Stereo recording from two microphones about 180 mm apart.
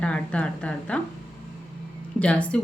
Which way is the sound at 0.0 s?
5° left (ahead or behind).